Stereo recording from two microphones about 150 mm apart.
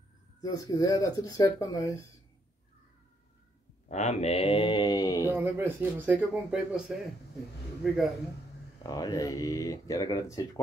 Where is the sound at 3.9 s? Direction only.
50° left (ahead or behind); by 5.3 s 25° left (ahead or behind).